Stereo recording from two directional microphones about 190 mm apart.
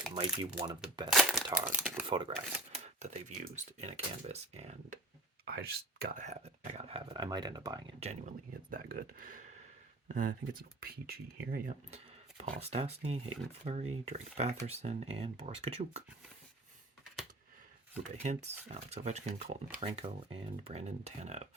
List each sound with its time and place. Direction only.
0.1 s speech: 25° right (ahead or behind)
1.1 s speech: centre (ahead or behind)
2.0 s speech: 25° right (ahead or behind)
2.8 s speech: 35° right (ahead or behind)
5.5 s speech: 55° right (ahead or behind)
6.2 s speech: 35° right (ahead or behind)
7.9 s speech: 35° right (ahead or behind)
8.7 s speech: 50° right (ahead or behind)
11.9 s speech: 35° right (ahead or behind)
18.2 s speech: 35° right (ahead or behind)